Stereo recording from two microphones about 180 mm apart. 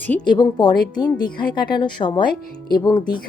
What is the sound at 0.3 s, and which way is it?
Speech, 25° left (ahead or behind).